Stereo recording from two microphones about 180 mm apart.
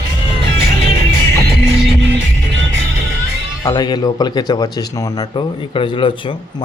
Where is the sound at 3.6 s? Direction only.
20° left (ahead or behind).